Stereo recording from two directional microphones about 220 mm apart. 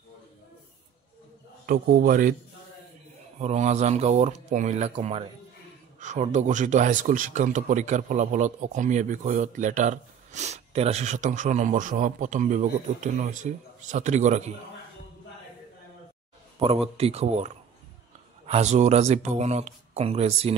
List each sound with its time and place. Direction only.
1.7 s speech: 40° right (ahead or behind)
3.3 s speech: 30° right (ahead or behind)
16.5 s speech: 25° right (ahead or behind)
18.5 s speech: 30° right (ahead or behind)